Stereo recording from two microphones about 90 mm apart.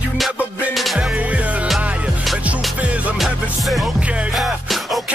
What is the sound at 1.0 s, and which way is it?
Music, 15° right (ahead or behind).